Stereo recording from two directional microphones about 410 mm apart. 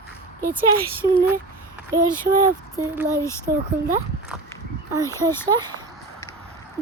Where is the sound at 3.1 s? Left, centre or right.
Centre.